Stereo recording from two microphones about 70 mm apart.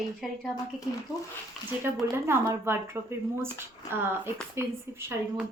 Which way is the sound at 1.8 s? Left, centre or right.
Right.